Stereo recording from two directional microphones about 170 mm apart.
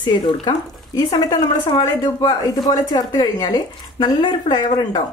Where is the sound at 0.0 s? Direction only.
25° left (ahead or behind).